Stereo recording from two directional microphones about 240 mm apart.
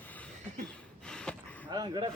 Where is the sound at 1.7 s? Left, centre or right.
Centre.